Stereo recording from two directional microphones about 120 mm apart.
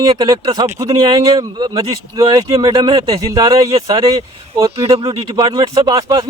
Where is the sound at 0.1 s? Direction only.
35° right (ahead or behind).